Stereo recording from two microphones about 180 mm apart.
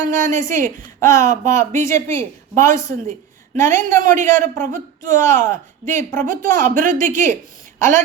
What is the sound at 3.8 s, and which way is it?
A woman's voice, 45° right (ahead or behind).